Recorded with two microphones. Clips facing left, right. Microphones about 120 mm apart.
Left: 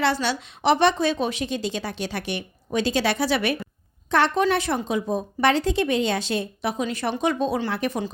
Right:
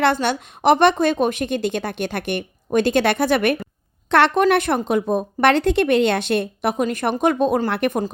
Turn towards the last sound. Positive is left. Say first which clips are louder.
# right 5 dB
turn(degrees=-60)  # may be behind; listen again after turning